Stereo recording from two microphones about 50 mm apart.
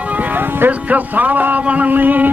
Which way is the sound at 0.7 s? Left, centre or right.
Right.